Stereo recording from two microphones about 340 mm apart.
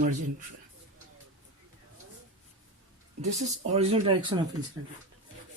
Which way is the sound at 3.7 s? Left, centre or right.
Centre.